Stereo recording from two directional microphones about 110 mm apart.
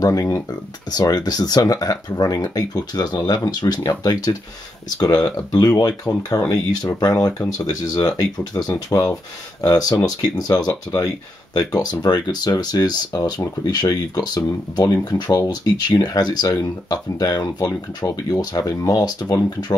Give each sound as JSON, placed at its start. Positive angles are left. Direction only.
{"t": 0.0, "sound": "speech", "side_deg": 35}